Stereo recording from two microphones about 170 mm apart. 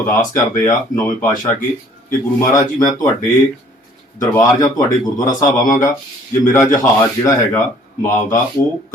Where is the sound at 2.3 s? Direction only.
20° left (ahead or behind).